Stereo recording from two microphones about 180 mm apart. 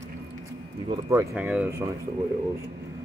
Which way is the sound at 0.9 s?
15° right (ahead or behind).